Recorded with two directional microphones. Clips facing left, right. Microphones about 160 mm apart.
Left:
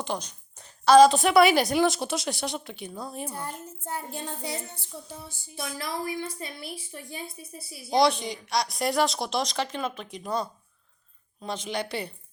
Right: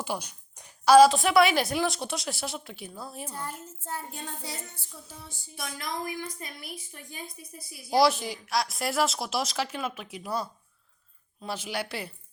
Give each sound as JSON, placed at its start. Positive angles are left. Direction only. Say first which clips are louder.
{"t": 0.0, "sound": "a woman's voice", "louder": "left 1 dB", "side_deg": -10}
{"t": 3.2, "sound": "a child's voice", "louder": "left 2 dB", "side_deg": 15}
{"t": 5.5, "sound": "a woman's voice", "louder": "left 2 dB", "side_deg": 30}
{"t": 7.9, "sound": "a woman's voice", "louder": "even", "side_deg": -5}